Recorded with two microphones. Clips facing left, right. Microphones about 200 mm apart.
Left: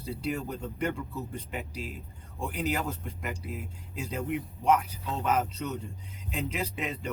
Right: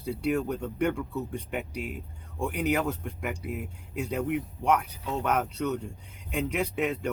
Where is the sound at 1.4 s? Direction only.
60° right (ahead or behind).